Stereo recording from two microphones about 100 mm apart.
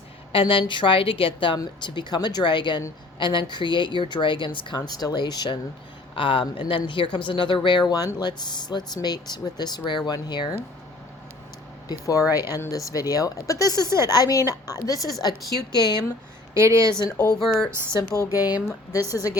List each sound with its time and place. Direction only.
0.3 s a woman's voice: 60° left (ahead or behind)
1.5 s speech: 50° left (ahead or behind)
6.1 s a woman's voice: 55° left (ahead or behind)
11.9 s speech: 35° left (ahead or behind)
16.6 s speech: 30° right (ahead or behind)
17.0 s speech: 40° left (ahead or behind)